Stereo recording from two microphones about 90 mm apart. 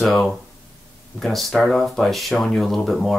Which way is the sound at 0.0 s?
Centre (ahead or behind).